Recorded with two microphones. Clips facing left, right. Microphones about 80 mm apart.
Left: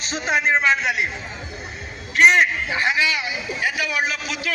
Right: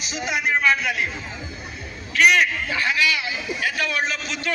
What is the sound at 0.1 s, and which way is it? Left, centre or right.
Speech, left.